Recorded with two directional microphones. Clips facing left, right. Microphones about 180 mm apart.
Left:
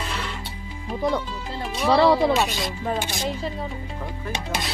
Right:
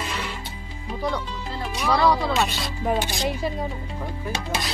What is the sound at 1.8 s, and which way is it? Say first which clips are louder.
Speech: left 4 dB; 30° left (ahead or behind).